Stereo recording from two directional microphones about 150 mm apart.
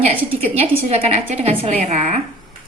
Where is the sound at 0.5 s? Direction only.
40° right (ahead or behind).